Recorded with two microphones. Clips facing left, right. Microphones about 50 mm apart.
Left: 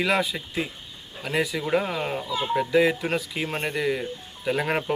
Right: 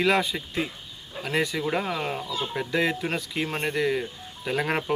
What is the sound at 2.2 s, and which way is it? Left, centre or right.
Speech, left.